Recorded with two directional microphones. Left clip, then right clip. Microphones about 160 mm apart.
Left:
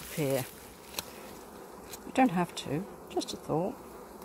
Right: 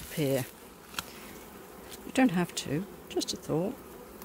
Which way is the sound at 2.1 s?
30° right (ahead or behind).